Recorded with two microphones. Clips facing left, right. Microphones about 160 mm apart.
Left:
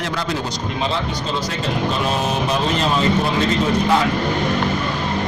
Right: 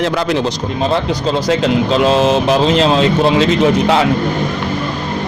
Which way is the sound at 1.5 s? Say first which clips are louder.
Right 11 dB; 90° right.